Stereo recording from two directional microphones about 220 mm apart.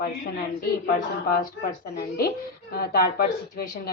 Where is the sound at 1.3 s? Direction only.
45° left (ahead or behind).